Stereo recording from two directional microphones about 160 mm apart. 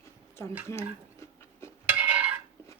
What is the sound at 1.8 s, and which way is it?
Dishes, 10° right (ahead or behind).